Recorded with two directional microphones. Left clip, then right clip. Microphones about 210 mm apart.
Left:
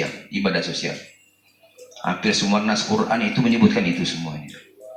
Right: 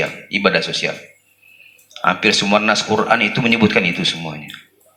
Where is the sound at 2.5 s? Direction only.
50° right (ahead or behind).